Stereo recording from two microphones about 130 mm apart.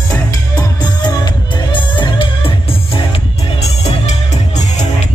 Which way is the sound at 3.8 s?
60° left (ahead or behind).